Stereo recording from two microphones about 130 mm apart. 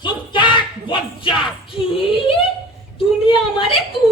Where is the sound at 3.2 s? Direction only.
45° left (ahead or behind).